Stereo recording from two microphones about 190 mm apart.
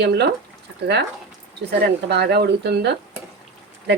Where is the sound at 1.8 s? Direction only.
60° right (ahead or behind).